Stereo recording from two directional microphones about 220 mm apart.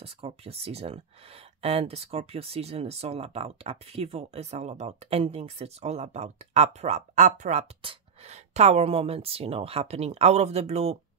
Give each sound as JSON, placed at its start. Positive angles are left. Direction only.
{"t": 0.0, "sound": "speech", "side_deg": -25}